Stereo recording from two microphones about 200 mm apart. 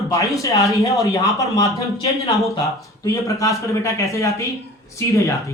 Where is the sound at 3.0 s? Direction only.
15° left (ahead or behind).